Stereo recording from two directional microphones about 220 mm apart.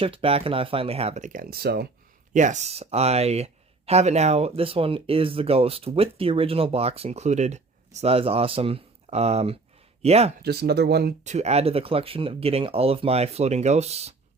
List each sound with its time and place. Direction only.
0.0 s speech: 25° right (ahead or behind); by 1.9 s 45° right (ahead or behind)
2.3 s speech: 35° right (ahead or behind)
10.4 s speech: 45° right (ahead or behind)
11.2 s speech: 30° right (ahead or behind)